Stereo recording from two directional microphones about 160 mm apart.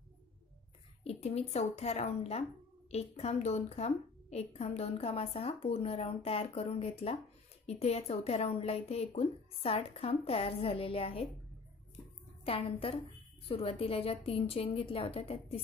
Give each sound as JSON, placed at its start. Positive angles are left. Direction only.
{"t": 1.0, "sound": "a woman's voice", "side_deg": 40}
{"t": 12.4, "sound": "a woman's voice", "side_deg": 35}